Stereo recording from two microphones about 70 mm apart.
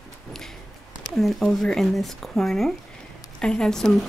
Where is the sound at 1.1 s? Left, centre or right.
Centre.